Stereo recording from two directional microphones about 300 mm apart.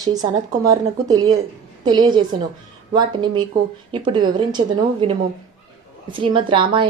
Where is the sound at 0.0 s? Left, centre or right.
Centre.